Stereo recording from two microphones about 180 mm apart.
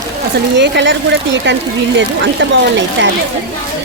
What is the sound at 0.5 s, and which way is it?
Speech, 75° right (ahead or behind).